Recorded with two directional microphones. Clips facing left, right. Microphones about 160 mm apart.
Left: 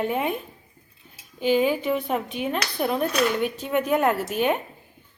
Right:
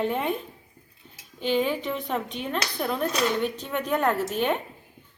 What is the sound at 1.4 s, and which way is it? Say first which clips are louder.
A woman's voice: left 4 dB; 10° left (ahead or behind).